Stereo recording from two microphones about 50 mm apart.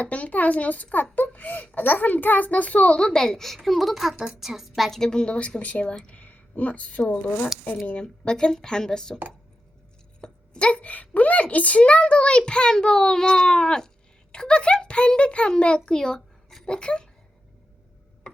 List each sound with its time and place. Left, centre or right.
0.0 s a child's voice: left; by 4.9 s centre
4.9 s a woman's voice: centre
6.1 s a sound: left
7.1 s a woman's voice: left; by 9.1 s centre
10.2 s a woman's voice: centre